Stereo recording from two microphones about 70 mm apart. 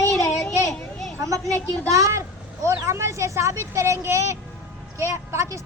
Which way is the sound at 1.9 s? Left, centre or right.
Right.